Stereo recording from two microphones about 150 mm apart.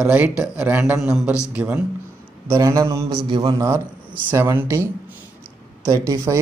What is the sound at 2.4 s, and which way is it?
Speech, 20° right (ahead or behind).